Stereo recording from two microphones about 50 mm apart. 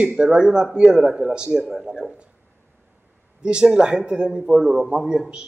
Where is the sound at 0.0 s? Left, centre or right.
Centre.